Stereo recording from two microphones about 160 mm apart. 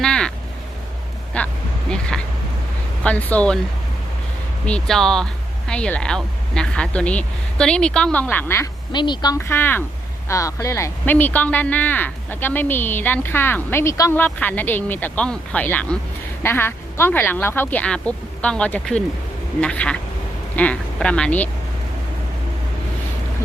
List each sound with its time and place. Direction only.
0.0 s vehicle: 5° left (ahead or behind)
1.3 s speech: 5° left (ahead or behind)
4.6 s speech: 5° left (ahead or behind)
8.9 s speech: 30° left (ahead or behind); by 21.5 s 10° left (ahead or behind)